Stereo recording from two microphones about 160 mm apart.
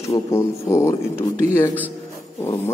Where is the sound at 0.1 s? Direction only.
20° left (ahead or behind).